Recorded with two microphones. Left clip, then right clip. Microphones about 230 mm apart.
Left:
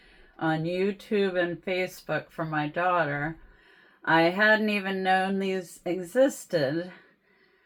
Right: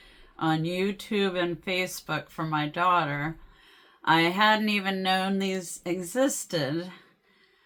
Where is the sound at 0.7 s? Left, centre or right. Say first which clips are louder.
Left 2 dB; right.